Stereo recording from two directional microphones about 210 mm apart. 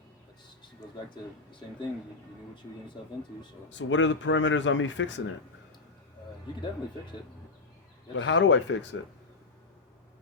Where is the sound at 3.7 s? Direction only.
60° left (ahead or behind).